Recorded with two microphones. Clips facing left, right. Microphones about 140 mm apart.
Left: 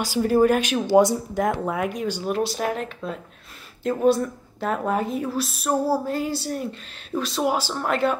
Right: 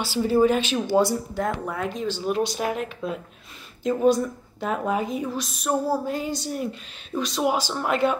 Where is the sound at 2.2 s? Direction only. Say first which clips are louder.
Even; centre (ahead or behind).